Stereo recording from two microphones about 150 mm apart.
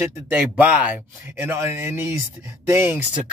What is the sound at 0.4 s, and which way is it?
Speech, 10° right (ahead or behind).